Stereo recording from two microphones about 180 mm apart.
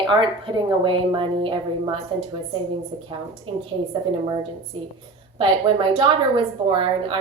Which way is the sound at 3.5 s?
30° right (ahead or behind).